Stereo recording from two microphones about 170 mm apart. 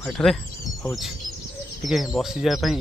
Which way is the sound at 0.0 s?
Centre (ahead or behind).